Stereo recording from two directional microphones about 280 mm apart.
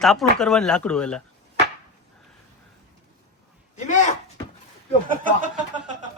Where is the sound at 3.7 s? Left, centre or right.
Left.